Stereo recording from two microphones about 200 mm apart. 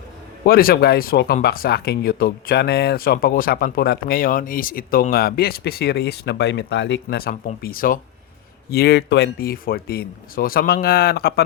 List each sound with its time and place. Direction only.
0.4 s speech: 50° left (ahead or behind)